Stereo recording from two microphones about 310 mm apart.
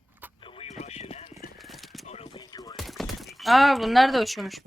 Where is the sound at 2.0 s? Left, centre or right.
Centre.